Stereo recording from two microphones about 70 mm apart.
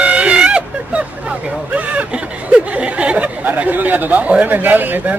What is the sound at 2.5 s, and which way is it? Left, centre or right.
Speech, centre.